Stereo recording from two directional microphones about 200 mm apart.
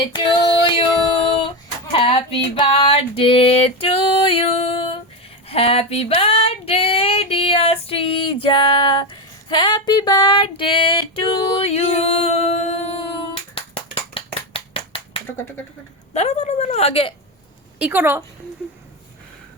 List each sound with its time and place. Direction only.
0.0 s female singing: 25° left (ahead or behind)
1.9 s female singing: 25° left (ahead or behind)
16.1 s a woman's voice: 35° left (ahead or behind)
17.7 s a woman's voice: 10° right (ahead or behind)